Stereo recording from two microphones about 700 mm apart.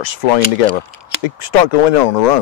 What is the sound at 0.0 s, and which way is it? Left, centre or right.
Speech, left.